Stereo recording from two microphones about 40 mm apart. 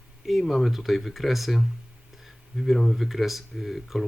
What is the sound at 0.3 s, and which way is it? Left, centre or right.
Speech, centre.